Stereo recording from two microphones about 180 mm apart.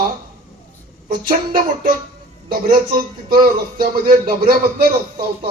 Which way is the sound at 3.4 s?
55° right (ahead or behind).